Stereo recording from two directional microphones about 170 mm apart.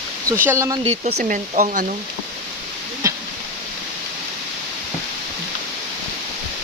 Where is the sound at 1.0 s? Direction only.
45° right (ahead or behind).